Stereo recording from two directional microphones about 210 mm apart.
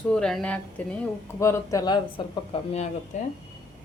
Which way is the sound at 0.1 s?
5° left (ahead or behind).